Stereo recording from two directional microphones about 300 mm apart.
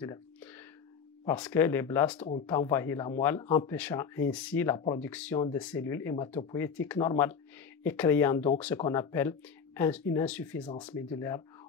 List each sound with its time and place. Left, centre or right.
0.0 s a sound: centre
1.2 s speech: centre
10.7 s speech: centre